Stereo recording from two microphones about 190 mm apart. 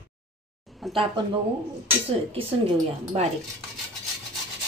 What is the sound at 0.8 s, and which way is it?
Speech, centre (ahead or behind).